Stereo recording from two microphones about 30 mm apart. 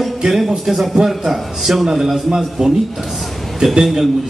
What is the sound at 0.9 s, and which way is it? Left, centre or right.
A man's voice, centre.